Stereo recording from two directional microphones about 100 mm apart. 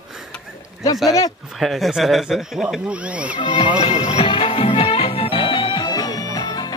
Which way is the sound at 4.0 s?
75° left (ahead or behind).